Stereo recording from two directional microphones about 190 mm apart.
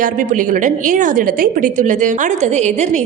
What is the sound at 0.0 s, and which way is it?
A woman's voice, 45° right (ahead or behind).